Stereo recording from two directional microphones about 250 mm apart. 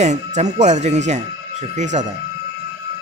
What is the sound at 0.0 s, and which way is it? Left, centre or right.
Speech, right.